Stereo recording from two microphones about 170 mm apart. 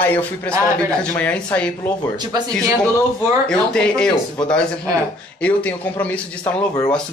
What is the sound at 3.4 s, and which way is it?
Speech, 5° left (ahead or behind).